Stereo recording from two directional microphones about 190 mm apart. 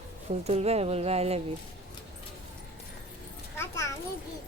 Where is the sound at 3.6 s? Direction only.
15° left (ahead or behind).